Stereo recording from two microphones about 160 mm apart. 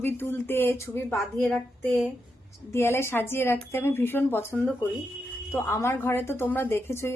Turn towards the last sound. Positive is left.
turn(degrees=15)  # may be behind; listen again after turning